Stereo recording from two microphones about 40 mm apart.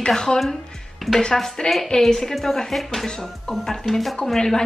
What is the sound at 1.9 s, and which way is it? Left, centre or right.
A woman's voice, centre.